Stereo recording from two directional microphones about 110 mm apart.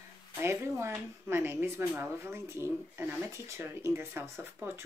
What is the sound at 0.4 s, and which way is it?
Speech, 25° right (ahead or behind).